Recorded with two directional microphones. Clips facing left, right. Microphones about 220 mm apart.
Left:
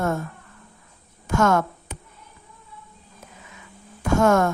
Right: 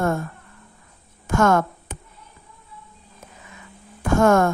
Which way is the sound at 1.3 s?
50° right (ahead or behind).